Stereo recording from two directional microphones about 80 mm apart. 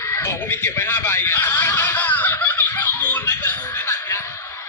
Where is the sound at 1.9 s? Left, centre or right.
Left.